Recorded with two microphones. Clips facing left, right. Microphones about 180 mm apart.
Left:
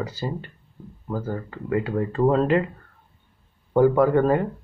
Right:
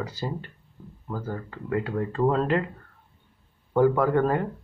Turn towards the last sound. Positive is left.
turn(degrees=5)  # may be behind; listen again after turning